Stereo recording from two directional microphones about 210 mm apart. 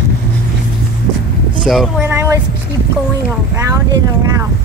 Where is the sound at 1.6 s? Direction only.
Centre (ahead or behind).